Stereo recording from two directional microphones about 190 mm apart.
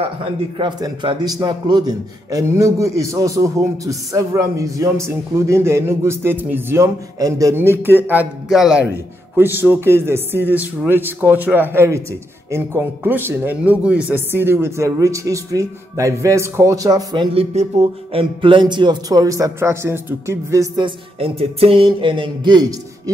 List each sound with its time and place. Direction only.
0.0 s a man's voice: 30° right (ahead or behind)